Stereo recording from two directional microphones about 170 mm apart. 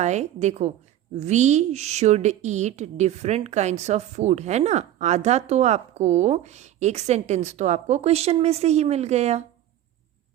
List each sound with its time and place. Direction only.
0.0 s a woman's voice: 40° right (ahead or behind)